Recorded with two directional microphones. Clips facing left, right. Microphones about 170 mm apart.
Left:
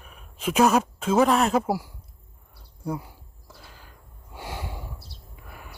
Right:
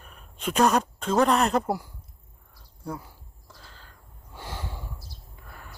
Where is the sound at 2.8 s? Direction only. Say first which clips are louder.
Left 4 dB; 10° left (ahead or behind).